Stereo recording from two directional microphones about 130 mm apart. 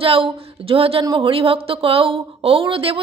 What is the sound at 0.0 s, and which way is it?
Speech, 45° right (ahead or behind).